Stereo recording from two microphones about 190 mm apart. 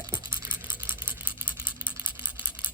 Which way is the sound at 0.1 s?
20° right (ahead or behind).